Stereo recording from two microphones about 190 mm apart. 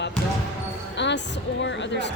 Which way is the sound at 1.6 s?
70° left (ahead or behind).